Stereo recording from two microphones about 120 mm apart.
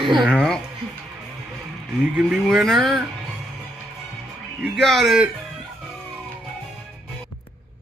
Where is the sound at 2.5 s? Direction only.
Centre (ahead or behind).